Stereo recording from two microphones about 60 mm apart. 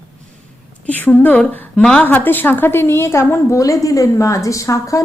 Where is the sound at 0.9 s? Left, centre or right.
Left.